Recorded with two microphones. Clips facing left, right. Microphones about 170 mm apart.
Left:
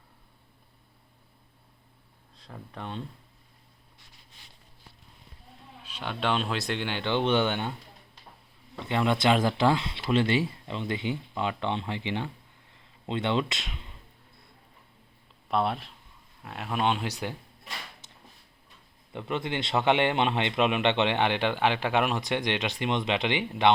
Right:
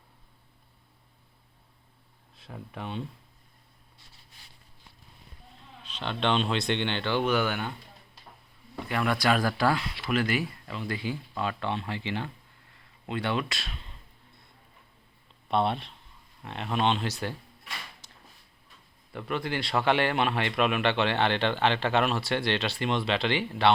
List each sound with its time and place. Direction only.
2.4 s speech: 5° right (ahead or behind)
5.8 s a man's voice: 10° left (ahead or behind); by 7.8 s 25° left (ahead or behind)
8.8 s speech: 25° left (ahead or behind)
12.7 s a sound: 20° left (ahead or behind)
15.4 s a man's voice: centre (ahead or behind)
19.1 s a man's voice: 20° left (ahead or behind)